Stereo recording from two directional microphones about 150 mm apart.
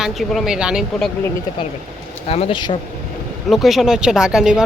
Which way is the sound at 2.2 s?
40° left (ahead or behind).